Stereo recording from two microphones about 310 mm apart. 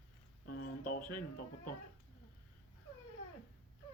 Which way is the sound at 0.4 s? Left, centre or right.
Left.